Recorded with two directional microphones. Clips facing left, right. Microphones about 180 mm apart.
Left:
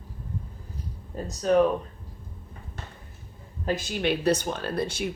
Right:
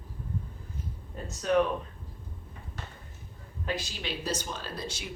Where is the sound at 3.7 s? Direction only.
50° left (ahead or behind).